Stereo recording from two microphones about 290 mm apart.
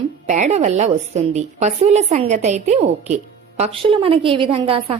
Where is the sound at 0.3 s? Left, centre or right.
Right.